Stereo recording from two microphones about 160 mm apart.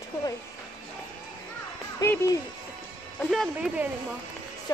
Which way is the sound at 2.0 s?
20° left (ahead or behind).